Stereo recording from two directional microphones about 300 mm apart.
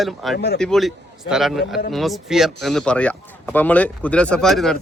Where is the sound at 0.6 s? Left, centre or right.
Centre.